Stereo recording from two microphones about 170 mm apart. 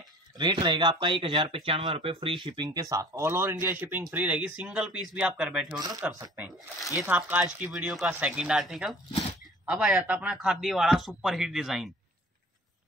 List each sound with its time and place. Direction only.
0.4 s speech: 25° right (ahead or behind); by 5.8 s 5° right (ahead or behind)
5.8 s speech: 20° right (ahead or behind)
6.3 s a man's voice: 5° right (ahead or behind)